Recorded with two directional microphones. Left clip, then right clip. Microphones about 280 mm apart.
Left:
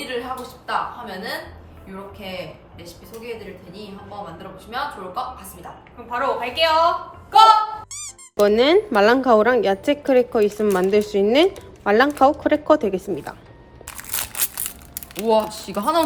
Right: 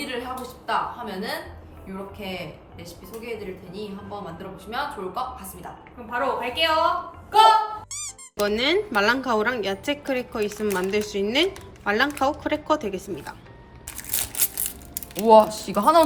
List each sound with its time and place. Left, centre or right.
0.0 s a woman's voice: centre
13.9 s crushing: centre
15.2 s speech: centre